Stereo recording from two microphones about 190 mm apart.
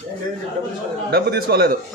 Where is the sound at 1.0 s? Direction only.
60° right (ahead or behind).